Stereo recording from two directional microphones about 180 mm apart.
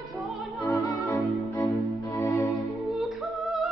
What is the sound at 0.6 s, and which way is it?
Music, 15° left (ahead or behind).